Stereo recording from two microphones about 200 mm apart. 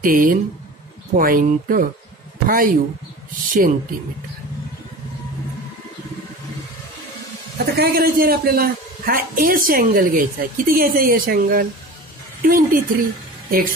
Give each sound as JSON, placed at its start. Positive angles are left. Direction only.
{"t": 0.0, "sound": "a man's voice", "side_deg": -45}
{"t": 7.5, "sound": "a man's voice", "side_deg": -50}